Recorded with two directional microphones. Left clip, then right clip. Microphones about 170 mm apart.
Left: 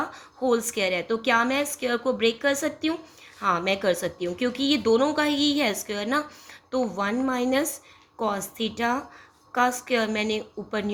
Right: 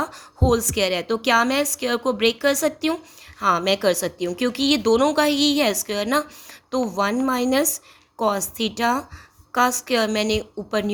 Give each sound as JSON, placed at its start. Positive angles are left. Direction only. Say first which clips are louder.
{"t": 0.0, "sound": "speech", "louder": "right 4 dB", "side_deg": -40}